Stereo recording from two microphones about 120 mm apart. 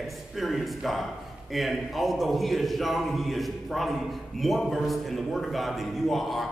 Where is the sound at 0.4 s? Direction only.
Centre (ahead or behind).